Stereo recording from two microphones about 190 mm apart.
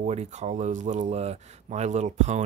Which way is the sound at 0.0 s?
35° right (ahead or behind).